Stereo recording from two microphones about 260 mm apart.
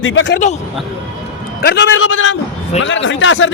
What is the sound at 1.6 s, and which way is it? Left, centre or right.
A man's voice, left.